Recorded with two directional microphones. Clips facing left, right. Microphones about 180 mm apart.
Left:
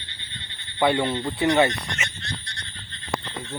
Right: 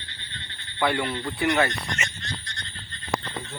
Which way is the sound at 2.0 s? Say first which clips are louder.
Even; 10° left (ahead or behind).